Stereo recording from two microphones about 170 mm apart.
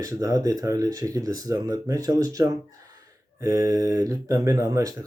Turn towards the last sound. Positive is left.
turn(degrees=-20)  # may be behind; listen again after turning